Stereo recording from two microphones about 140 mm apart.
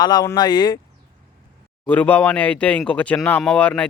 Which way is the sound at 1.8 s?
10° left (ahead or behind).